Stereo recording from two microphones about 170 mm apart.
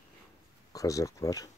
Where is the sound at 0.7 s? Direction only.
20° left (ahead or behind).